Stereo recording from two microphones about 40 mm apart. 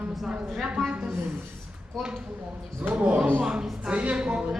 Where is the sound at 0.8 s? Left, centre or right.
Right.